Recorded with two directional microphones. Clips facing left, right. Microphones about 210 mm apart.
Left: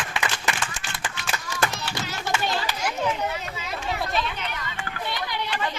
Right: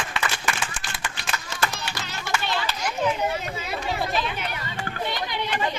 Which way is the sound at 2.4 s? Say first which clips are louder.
Left 1 dB; 40° left (ahead or behind).